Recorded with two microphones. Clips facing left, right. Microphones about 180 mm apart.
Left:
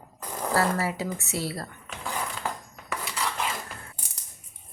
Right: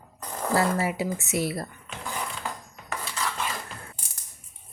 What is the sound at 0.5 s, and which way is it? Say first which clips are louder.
A woman's voice: right 1 dB; 15° right (ahead or behind).